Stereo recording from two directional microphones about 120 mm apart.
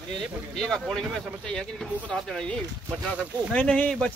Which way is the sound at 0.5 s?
5° left (ahead or behind).